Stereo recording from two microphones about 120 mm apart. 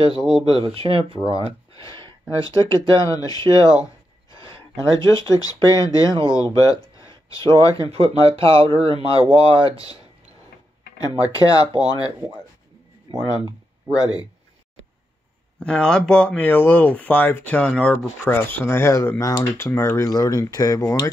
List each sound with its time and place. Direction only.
0.0 s speech: 40° left (ahead or behind)
0.7 s speech: 50° right (ahead or behind)
1.8 s speech: 30° left (ahead or behind)
7.9 s speech: 55° right (ahead or behind)
11.1 s speech: 30° left (ahead or behind)
13.1 s speech: 35° left (ahead or behind)
15.6 s speech: 5° left (ahead or behind); by 21.1 s 30° left (ahead or behind)